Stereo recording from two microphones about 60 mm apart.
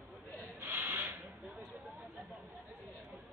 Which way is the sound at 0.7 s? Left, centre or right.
Right.